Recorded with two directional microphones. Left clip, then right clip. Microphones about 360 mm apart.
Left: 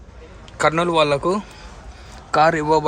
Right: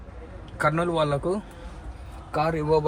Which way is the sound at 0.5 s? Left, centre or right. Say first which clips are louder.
Left 7 dB; centre.